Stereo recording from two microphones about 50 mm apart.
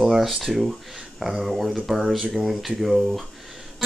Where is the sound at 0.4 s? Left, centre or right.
Centre.